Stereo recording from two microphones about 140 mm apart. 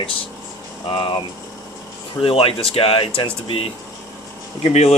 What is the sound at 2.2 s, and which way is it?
Speech, 40° left (ahead or behind).